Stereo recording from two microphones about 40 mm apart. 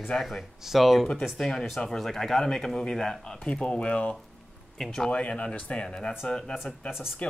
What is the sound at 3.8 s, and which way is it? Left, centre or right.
Speech, left.